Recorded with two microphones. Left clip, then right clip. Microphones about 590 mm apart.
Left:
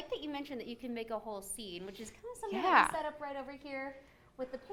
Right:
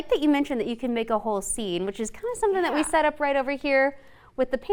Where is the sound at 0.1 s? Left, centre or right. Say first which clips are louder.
Right 19 dB; right.